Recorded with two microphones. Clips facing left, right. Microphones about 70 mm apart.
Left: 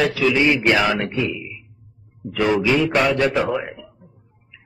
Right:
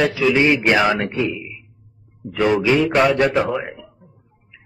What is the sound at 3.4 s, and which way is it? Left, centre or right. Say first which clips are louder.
Speech: even; centre.